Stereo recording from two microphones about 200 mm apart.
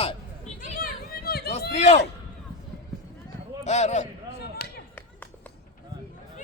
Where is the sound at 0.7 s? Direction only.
45° left (ahead or behind).